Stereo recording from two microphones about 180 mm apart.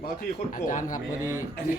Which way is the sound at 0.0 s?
50° left (ahead or behind).